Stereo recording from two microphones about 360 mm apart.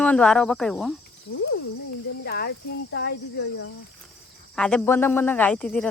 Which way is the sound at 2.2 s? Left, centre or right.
Left.